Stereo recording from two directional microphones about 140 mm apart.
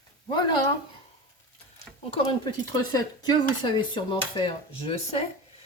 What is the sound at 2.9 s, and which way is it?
Speech, 30° left (ahead or behind).